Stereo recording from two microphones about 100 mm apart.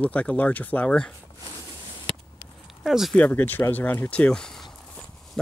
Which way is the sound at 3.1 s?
15° left (ahead or behind).